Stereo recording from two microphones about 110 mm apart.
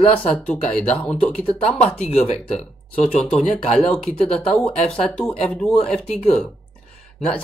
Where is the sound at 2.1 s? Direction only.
75° left (ahead or behind).